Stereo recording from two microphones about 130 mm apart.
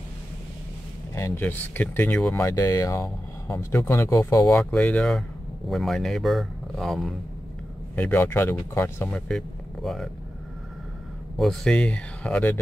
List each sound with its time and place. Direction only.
1.1 s speech: 20° left (ahead or behind)
2.4 s speech: 25° left (ahead or behind)
4.6 s speech: 10° left (ahead or behind)
7.9 s speech: 15° left (ahead or behind)
9.3 s speech: centre (ahead or behind)
11.3 s speech: 5° left (ahead or behind)